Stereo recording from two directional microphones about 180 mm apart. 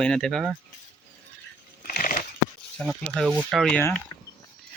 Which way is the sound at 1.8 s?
50° left (ahead or behind).